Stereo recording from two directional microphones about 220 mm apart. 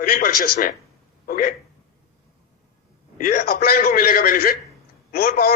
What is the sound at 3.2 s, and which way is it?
A man's voice, 40° left (ahead or behind).